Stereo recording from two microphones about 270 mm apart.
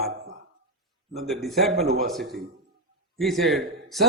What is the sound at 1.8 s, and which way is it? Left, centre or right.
Speech, right.